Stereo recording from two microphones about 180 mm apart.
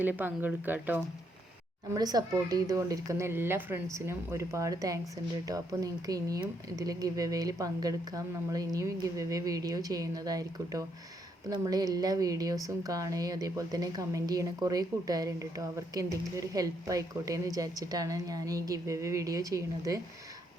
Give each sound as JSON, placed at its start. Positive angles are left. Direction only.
{"t": 0.0, "sound": "speech", "side_deg": -10}
{"t": 1.9, "sound": "speech", "side_deg": -20}